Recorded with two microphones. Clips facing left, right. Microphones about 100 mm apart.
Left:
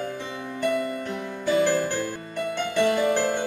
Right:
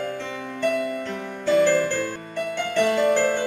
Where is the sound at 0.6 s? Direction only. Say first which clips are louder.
Right 2 dB; 15° left (ahead or behind).